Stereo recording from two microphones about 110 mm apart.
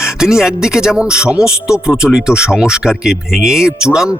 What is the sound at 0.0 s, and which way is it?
Speech, 5° right (ahead or behind).